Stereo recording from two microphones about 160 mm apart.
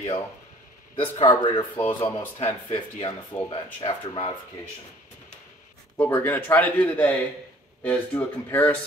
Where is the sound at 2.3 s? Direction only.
35° left (ahead or behind).